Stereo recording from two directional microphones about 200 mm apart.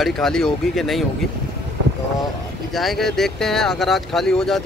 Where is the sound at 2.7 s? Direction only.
Centre (ahead or behind).